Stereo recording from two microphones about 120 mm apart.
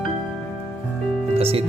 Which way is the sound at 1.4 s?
55° right (ahead or behind).